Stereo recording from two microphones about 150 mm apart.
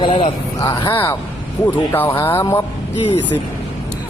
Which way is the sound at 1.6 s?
15° left (ahead or behind).